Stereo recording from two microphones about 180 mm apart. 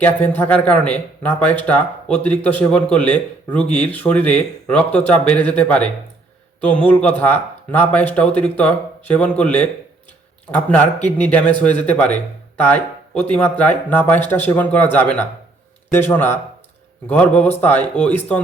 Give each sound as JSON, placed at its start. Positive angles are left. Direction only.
{"t": 0.0, "sound": "speech", "side_deg": 10}
{"t": 7.2, "sound": "speech", "side_deg": 10}